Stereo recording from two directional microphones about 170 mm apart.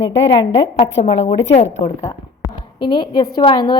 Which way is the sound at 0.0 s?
90° left.